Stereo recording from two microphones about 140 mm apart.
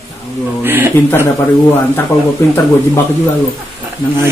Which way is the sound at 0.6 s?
15° right (ahead or behind).